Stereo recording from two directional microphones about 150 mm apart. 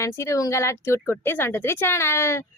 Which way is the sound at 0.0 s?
20° left (ahead or behind).